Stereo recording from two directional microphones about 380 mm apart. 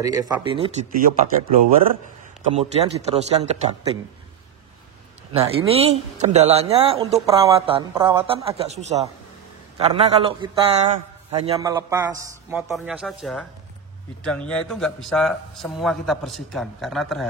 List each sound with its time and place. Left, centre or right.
0.0 s a man's voice: centre
2.5 s a man's voice: centre
5.3 s a man's voice: centre
9.8 s a man's voice: centre